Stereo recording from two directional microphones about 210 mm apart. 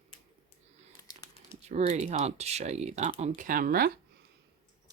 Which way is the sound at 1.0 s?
15° left (ahead or behind).